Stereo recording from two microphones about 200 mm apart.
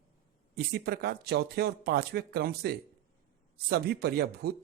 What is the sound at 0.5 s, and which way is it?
Speech, 50° right (ahead or behind).